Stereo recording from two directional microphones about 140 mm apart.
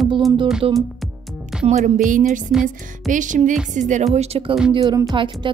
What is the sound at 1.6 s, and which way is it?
Music, 60° right (ahead or behind).